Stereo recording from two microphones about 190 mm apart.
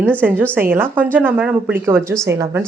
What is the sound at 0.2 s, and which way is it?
Speech, 10° right (ahead or behind).